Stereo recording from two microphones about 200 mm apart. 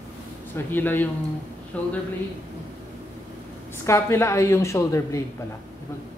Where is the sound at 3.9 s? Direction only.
15° left (ahead or behind).